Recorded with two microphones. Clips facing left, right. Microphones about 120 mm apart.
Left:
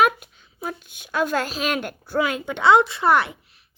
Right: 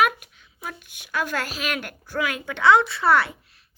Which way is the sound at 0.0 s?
30° left (ahead or behind).